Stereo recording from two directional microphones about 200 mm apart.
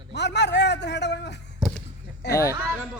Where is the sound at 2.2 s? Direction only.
60° left (ahead or behind).